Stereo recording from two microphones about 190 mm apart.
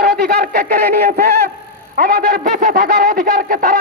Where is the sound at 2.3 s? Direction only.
50° right (ahead or behind).